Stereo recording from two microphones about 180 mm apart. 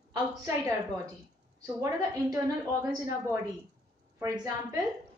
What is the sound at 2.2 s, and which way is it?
Speech, 20° right (ahead or behind).